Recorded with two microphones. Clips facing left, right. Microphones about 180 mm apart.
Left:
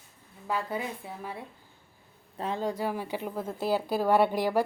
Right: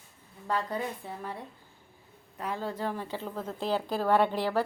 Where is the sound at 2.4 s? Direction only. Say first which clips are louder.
Left 3 dB; 20° left (ahead or behind).